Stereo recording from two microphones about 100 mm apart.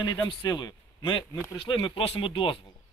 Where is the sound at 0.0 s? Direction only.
45° left (ahead or behind).